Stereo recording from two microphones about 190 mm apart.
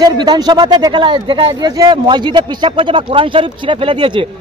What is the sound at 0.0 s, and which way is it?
Speech, 20° right (ahead or behind).